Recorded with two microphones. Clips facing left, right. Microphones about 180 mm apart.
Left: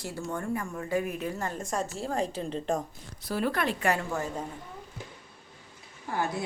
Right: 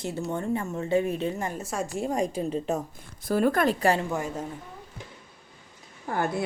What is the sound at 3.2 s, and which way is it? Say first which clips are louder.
Speech: right 6 dB; 50° right (ahead or behind).